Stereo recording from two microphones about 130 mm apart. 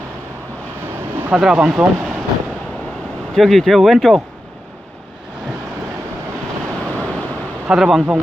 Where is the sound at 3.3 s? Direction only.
Centre (ahead or behind).